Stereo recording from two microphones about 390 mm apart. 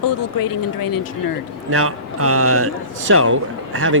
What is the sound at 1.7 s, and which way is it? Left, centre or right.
Speech, right.